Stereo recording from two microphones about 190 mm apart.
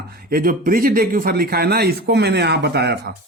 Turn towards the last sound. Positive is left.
turn(degrees=-60)  # may be behind; listen again after turning